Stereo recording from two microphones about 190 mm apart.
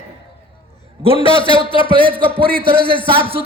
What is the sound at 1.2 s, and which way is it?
Speech, 25° left (ahead or behind).